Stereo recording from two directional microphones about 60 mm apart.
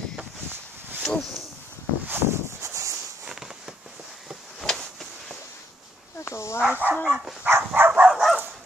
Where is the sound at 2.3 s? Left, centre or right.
Right.